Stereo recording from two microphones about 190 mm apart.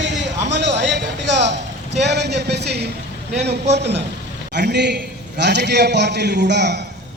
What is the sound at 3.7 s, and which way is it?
A man's voice, 65° right (ahead or behind).